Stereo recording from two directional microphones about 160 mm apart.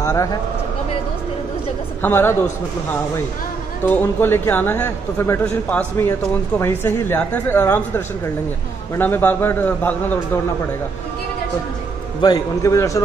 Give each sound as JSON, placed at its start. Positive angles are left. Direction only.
{"t": 0.0, "sound": "speech", "side_deg": 20}
{"t": 2.0, "sound": "a man's voice", "side_deg": 15}
{"t": 3.8, "sound": "a man's voice", "side_deg": 15}
{"t": 12.2, "sound": "a man's voice", "side_deg": 25}